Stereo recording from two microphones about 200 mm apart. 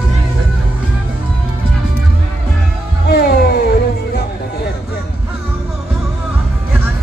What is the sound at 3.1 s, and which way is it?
Music, 50° left (ahead or behind).